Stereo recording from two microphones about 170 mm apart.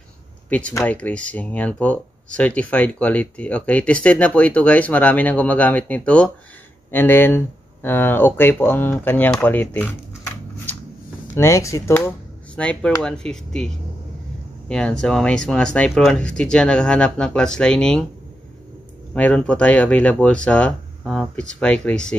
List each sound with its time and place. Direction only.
0.5 s speech: 10° left (ahead or behind)
12.5 s speech: 5° left (ahead or behind)
14.7 s speech: 5° left (ahead or behind)
19.1 s speech: 5° left (ahead or behind)